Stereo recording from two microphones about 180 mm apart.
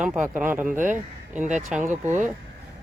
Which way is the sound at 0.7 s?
45° right (ahead or behind).